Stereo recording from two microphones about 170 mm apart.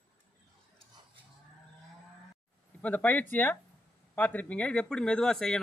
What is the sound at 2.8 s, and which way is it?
Speech, 10° left (ahead or behind).